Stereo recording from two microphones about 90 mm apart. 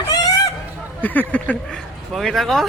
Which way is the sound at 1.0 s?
20° left (ahead or behind).